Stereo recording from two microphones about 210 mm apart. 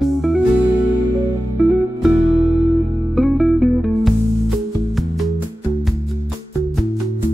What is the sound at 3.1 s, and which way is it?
Music, centre (ahead or behind).